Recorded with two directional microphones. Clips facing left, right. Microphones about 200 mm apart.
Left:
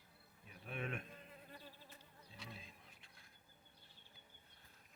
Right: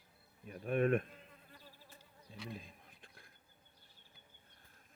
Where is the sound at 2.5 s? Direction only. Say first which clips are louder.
Right 7 dB; 50° right (ahead or behind).